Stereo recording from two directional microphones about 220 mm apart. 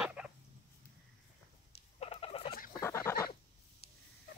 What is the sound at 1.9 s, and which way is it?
Rodents, 25° left (ahead or behind).